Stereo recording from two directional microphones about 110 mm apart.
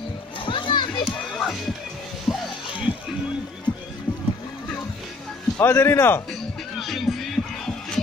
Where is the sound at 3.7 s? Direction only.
45° left (ahead or behind).